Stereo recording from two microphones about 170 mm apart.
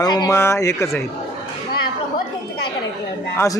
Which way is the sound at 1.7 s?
70° left (ahead or behind).